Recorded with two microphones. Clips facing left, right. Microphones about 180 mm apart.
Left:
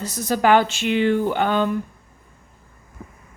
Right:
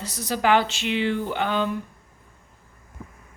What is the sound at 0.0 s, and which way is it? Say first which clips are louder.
Speech: left 4 dB; 45° left (ahead or behind).